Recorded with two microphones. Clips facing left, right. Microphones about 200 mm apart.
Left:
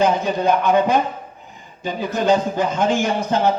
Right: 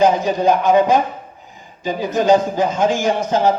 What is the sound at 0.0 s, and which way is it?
A man's voice, 55° left (ahead or behind).